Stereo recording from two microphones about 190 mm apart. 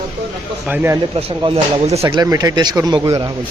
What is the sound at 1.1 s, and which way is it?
Speech, 30° right (ahead or behind).